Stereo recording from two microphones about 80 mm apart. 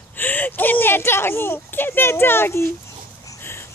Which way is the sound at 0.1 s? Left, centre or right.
Left.